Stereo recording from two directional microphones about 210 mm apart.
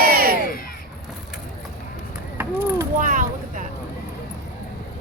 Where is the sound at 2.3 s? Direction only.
10° right (ahead or behind).